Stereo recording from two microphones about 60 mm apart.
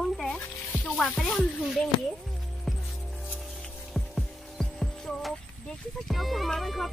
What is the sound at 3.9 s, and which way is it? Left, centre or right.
Music, centre.